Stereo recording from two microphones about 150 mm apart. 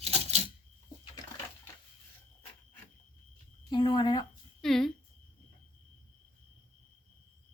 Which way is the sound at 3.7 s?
30° left (ahead or behind).